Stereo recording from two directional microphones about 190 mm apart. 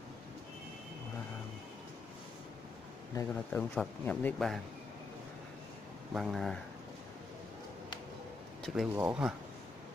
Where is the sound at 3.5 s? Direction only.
5° left (ahead or behind).